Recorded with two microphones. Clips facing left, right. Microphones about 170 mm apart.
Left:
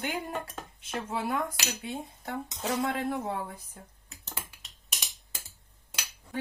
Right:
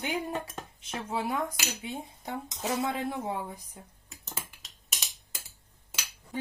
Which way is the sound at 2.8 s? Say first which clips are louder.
Left 1 dB; 15° right (ahead or behind).